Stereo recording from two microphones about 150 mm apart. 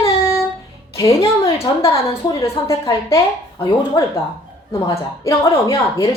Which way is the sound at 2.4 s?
20° left (ahead or behind).